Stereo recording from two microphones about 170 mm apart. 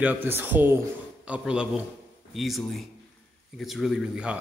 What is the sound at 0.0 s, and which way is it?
A man's voice, 10° right (ahead or behind).